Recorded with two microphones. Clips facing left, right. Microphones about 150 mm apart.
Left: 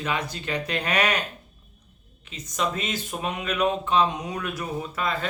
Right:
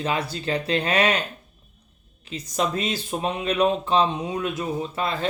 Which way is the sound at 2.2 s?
35° right (ahead or behind).